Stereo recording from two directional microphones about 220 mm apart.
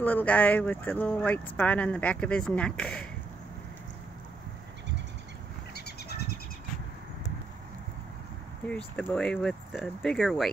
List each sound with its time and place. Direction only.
0.0 s speech: 5° left (ahead or behind)
5.8 s a sound: 45° left (ahead or behind)
8.6 s speech: 5° left (ahead or behind)